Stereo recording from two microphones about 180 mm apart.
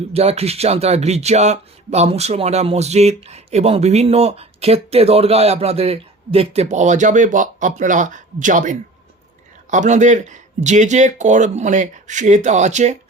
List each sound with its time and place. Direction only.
0.1 s speech: 35° right (ahead or behind)